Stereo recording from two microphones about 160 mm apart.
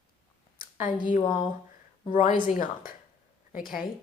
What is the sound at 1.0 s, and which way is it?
Speech, 55° left (ahead or behind).